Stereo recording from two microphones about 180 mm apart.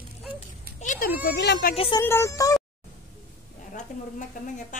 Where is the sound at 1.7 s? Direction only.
30° left (ahead or behind).